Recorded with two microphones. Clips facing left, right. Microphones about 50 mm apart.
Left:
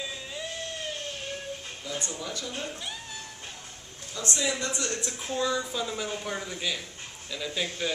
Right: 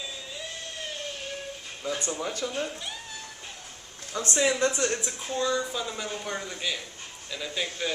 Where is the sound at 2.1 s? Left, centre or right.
Right.